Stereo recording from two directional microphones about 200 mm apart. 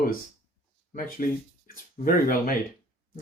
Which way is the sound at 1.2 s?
45° left (ahead or behind).